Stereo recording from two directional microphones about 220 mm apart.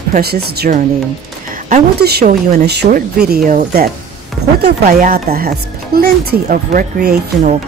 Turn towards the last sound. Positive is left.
turn(degrees=-40)  # may be behind; listen again after turning